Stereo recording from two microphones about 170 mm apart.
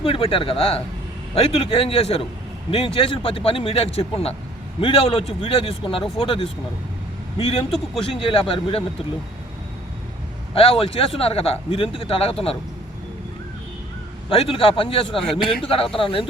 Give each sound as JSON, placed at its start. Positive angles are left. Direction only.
{"t": 0.0, "sound": "speech", "side_deg": 30}
{"t": 8.1, "sound": "speech", "side_deg": 30}
{"t": 10.5, "sound": "speech", "side_deg": 35}
{"t": 14.3, "sound": "speech", "side_deg": 35}